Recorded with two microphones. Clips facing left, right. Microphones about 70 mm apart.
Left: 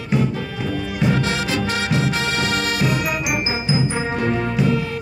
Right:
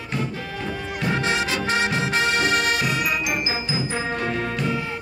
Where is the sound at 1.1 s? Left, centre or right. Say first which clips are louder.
Left 2 dB; right.